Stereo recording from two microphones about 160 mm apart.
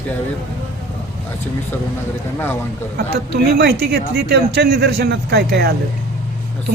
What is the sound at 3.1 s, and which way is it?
Speech, 90° right.